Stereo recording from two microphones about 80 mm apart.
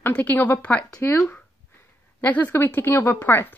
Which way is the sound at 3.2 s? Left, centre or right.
Left.